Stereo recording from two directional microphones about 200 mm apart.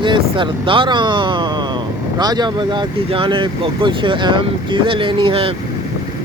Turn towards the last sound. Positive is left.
turn(degrees=-25)  # may be behind; listen again after turning